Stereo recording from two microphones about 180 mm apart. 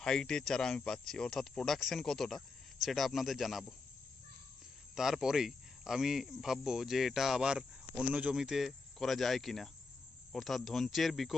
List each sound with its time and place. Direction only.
0.0 s speech: 5° left (ahead or behind)
4.9 s speech: centre (ahead or behind)